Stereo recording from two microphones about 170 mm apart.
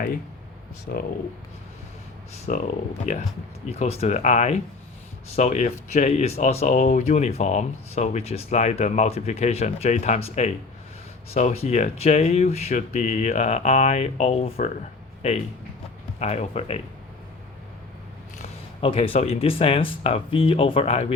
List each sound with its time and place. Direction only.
0.9 s speech: 65° left (ahead or behind)
2.5 s speech: 50° left (ahead or behind)
18.8 s speech: 35° left (ahead or behind)